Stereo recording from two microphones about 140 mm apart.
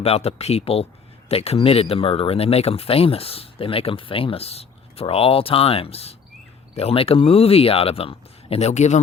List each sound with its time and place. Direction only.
0.0 s speech: 45° left (ahead or behind)